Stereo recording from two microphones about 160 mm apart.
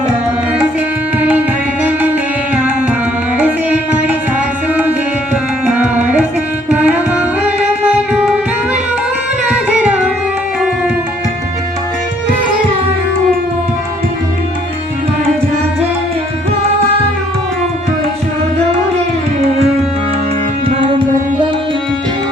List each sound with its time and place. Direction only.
3.3 s music: 10° right (ahead or behind)
5.3 s tabla: 10° right (ahead or behind)
6.7 s music: 10° right (ahead or behind)
20.7 s music: 35° right (ahead or behind)